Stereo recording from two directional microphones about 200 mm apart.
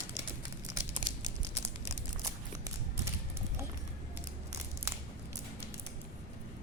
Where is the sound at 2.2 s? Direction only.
15° right (ahead or behind).